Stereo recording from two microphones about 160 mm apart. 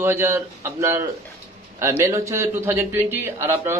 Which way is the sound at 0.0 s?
15° right (ahead or behind).